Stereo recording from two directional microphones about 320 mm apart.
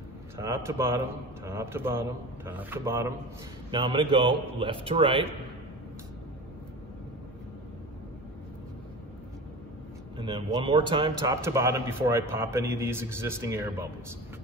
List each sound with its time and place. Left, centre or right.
0.4 s a man's voice: centre
10.1 s a man's voice: centre